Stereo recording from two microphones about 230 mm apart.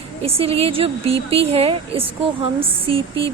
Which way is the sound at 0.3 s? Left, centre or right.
Right.